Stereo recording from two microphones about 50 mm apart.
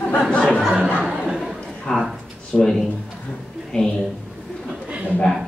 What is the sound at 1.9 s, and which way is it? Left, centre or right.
Speech, centre.